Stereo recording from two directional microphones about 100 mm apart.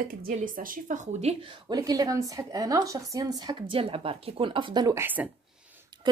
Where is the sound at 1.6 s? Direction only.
40° right (ahead or behind).